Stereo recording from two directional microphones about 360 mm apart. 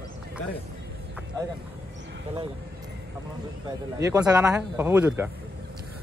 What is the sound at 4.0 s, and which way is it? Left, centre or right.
Speech, centre.